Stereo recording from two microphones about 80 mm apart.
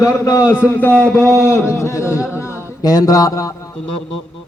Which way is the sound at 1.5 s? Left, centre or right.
Left.